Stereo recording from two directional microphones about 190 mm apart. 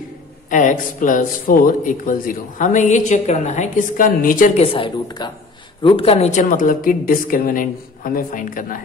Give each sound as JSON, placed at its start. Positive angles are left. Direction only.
{"t": 0.5, "sound": "speech", "side_deg": 40}
{"t": 4.6, "sound": "a woman's voice", "side_deg": 30}
{"t": 6.4, "sound": "speech", "side_deg": 45}